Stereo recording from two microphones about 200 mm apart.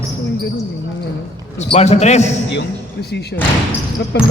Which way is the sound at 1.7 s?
35° left (ahead or behind).